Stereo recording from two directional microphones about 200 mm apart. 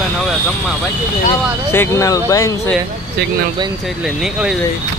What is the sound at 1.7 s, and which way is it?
Speech, 15° left (ahead or behind).